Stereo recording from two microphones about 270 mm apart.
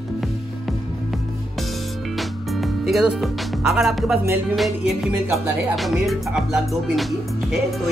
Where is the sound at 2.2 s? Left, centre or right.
Centre.